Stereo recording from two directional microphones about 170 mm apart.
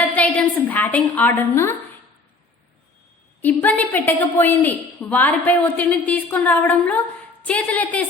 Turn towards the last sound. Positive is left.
turn(degrees=10)  # may be behind; listen again after turning